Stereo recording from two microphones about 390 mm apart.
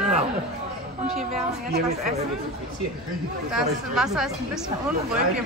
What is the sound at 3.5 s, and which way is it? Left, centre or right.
Speech, centre.